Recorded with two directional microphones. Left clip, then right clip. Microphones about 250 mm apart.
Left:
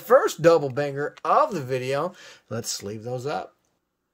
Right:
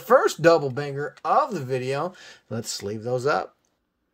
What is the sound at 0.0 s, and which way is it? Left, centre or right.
Speech, centre.